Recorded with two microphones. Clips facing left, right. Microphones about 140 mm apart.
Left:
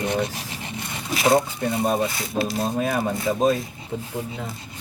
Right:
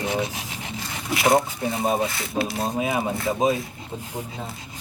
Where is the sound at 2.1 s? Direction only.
20° left (ahead or behind).